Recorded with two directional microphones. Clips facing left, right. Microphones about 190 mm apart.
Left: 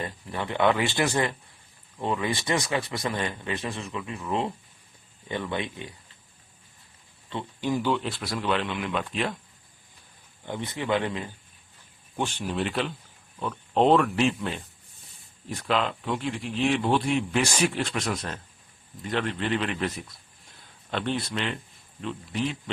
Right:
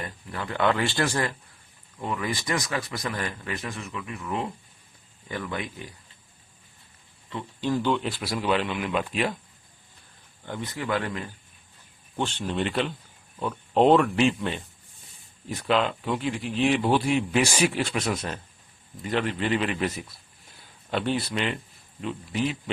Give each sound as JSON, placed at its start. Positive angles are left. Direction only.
{"t": 0.0, "sound": "a man's voice", "side_deg": 25}
{"t": 7.6, "sound": "speech", "side_deg": 10}
{"t": 7.9, "sound": "speech", "side_deg": 0}
{"t": 10.4, "sound": "a man's voice", "side_deg": 20}
{"t": 12.1, "sound": "speech", "side_deg": 10}
{"t": 20.9, "sound": "speech", "side_deg": -5}